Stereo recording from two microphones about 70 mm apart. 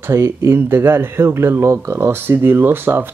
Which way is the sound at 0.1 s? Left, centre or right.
Right.